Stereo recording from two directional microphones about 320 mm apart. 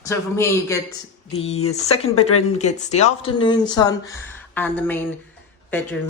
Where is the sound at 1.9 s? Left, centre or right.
Centre.